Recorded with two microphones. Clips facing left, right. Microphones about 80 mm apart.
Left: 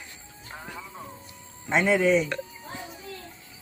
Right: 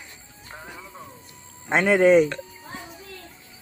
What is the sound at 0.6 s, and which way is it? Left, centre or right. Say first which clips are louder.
Music: left 2 dB; centre.